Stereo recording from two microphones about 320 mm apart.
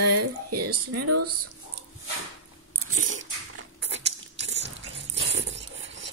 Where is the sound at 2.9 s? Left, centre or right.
Right.